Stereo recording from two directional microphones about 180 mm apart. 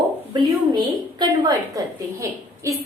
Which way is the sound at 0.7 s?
25° right (ahead or behind).